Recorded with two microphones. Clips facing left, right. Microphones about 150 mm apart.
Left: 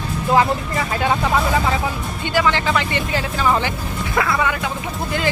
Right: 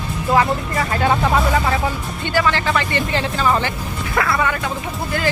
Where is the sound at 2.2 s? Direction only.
15° left (ahead or behind).